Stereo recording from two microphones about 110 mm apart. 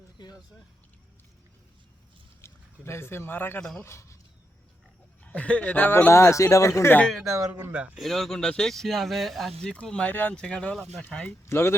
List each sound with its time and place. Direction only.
2.4 s speech: 25° left (ahead or behind)
5.2 s speech: 15° left (ahead or behind); by 6.9 s 30° left (ahead or behind)
7.5 s speech: 10° right (ahead or behind)
8.0 s speech: centre (ahead or behind)
11.4 s speech: 25° left (ahead or behind)